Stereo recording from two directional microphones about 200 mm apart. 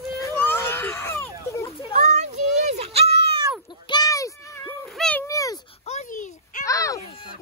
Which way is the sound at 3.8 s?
20° left (ahead or behind).